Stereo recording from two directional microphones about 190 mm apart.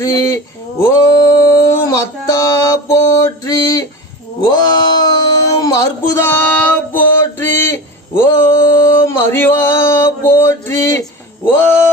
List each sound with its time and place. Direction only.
0.0 s speech: 15° left (ahead or behind)
0.8 s a sound: 15° left (ahead or behind)
8.9 s male singing: 15° left (ahead or behind)